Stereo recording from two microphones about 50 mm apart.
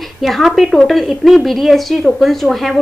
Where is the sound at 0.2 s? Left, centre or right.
Centre.